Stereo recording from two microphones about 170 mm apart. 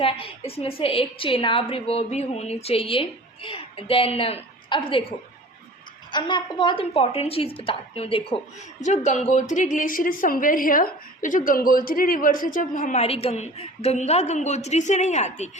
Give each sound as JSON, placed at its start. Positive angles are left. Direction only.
{"t": 0.0, "sound": "a woman's voice", "side_deg": 35}
{"t": 6.1, "sound": "a woman's voice", "side_deg": 25}
{"t": 8.8, "sound": "a woman's voice", "side_deg": 45}
{"t": 13.0, "sound": "a woman's voice", "side_deg": 35}